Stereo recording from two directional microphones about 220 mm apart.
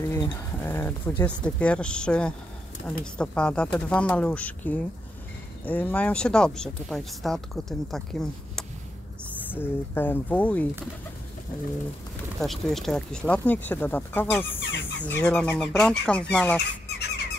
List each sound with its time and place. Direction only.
0.1 s speech: 15° left (ahead or behind)
12.4 s speech: centre (ahead or behind)
14.6 s speech: 55° left (ahead or behind)
15.0 s speech: 5° left (ahead or behind)